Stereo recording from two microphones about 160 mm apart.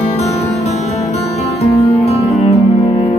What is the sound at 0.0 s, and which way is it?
Music, 40° left (ahead or behind).